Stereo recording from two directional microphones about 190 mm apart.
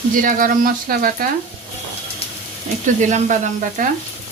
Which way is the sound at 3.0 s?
40° right (ahead or behind).